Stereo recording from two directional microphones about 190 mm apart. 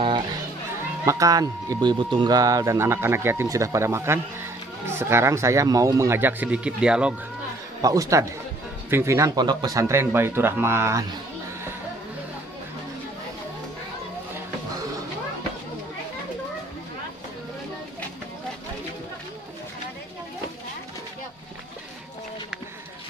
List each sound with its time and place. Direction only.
0.0 s music: 25° right (ahead or behind)
1.0 s speech: 15° right (ahead or behind)
7.8 s speech: 20° right (ahead or behind)